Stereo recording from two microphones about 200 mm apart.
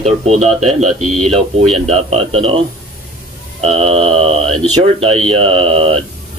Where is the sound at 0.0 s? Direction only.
35° right (ahead or behind).